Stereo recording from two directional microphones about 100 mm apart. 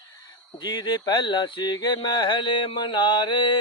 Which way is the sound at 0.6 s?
45° left (ahead or behind).